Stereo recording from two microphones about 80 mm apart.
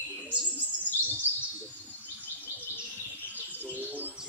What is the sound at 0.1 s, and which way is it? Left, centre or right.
Bird, centre.